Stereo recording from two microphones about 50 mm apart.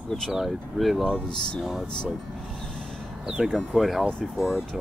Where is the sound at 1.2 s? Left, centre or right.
Centre.